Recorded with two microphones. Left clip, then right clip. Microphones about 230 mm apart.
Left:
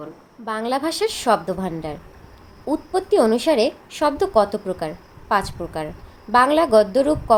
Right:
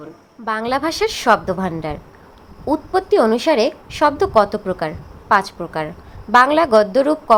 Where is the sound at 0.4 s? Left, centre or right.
Centre.